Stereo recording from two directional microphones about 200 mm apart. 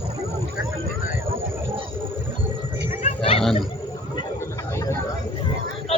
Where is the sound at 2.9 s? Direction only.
35° left (ahead or behind).